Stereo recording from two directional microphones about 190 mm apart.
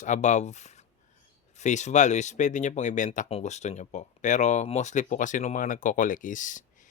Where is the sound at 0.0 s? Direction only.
40° left (ahead or behind).